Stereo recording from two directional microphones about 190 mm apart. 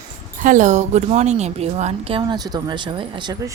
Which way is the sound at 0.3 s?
45° right (ahead or behind).